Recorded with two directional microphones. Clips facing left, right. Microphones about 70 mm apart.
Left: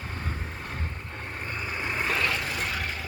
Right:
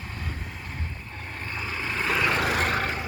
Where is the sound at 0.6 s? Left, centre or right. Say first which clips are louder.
Left 1 dB; left.